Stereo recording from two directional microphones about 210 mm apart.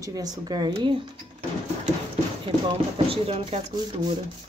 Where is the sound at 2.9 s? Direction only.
25° right (ahead or behind).